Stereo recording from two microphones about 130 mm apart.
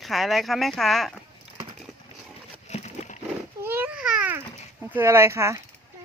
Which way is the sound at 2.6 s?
60° left (ahead or behind).